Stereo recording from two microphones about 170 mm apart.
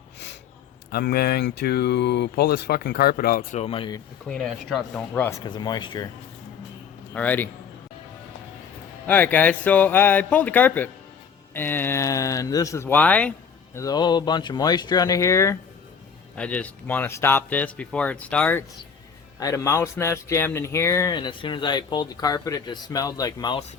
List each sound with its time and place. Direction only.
0.9 s speech: 65° left (ahead or behind)
3.6 s speech: 30° left (ahead or behind)
4.3 s speech: centre (ahead or behind)
5.3 s speech: 25° left (ahead or behind)
7.1 s speech: 10° left (ahead or behind)
9.0 s speech: 10° left (ahead or behind)
13.7 s speech: 20° left (ahead or behind)
19.4 s speech: 20° left (ahead or behind)